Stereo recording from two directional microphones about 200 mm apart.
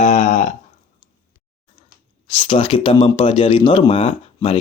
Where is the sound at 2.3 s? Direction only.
25° left (ahead or behind).